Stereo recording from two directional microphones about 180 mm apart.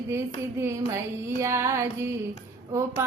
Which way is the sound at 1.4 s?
15° right (ahead or behind).